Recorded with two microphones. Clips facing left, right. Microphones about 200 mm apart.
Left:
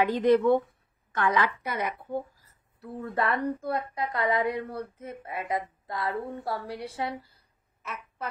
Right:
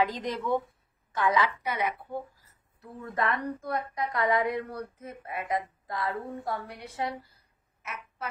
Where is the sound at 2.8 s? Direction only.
35° left (ahead or behind).